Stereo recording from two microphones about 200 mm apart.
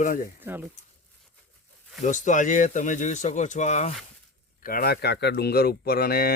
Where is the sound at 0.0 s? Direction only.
45° left (ahead or behind).